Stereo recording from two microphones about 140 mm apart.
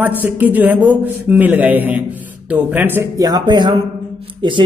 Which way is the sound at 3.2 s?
30° right (ahead or behind).